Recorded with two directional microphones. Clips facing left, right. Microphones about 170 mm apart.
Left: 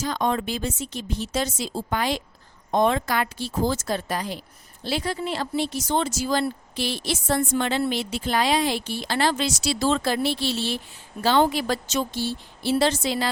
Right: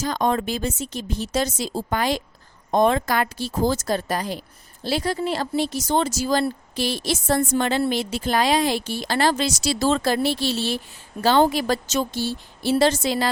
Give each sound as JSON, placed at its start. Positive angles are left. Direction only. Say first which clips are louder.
{"t": 0.0, "sound": "a woman's voice", "louder": "right 2 dB", "side_deg": -45}